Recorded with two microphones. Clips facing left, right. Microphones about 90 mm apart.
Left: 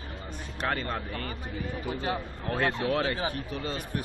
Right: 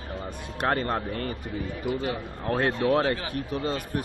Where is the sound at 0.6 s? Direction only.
40° right (ahead or behind).